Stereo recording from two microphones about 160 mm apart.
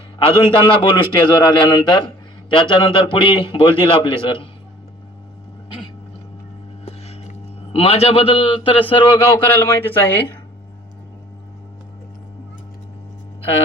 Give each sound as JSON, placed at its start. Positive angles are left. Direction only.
{"t": 0.3, "sound": "a man's voice", "side_deg": 30}
{"t": 6.8, "sound": "a sound", "side_deg": 40}
{"t": 9.4, "sound": "speech", "side_deg": 15}